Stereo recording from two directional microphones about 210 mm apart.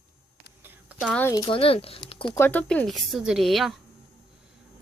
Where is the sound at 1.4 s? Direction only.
25° left (ahead or behind).